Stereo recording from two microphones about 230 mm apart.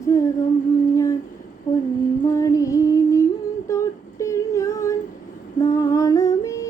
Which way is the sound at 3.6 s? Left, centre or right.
Centre.